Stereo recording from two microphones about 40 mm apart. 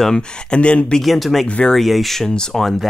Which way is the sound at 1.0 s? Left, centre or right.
Centre.